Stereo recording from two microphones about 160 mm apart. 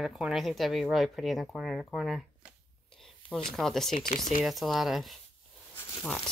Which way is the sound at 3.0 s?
5° left (ahead or behind).